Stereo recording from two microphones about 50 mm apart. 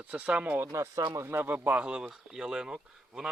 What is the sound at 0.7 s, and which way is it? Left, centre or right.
Speech, right.